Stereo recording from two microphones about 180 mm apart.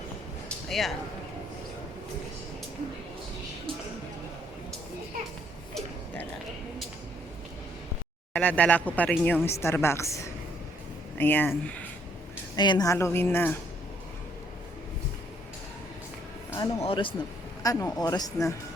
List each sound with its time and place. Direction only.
0.7 s speech: centre (ahead or behind)
8.3 s speech: 10° left (ahead or behind)
11.2 s speech: 10° left (ahead or behind)
12.5 s speech: 25° left (ahead or behind)
16.5 s music: 15° left (ahead or behind)
16.8 s speech: 30° left (ahead or behind)